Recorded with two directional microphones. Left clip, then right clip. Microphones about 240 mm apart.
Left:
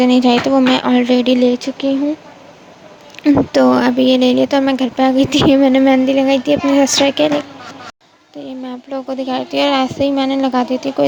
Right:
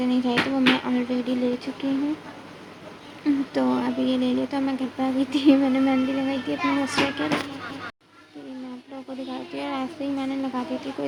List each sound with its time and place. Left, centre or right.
0.0 s speech: left
3.2 s speech: left
8.9 s speech: left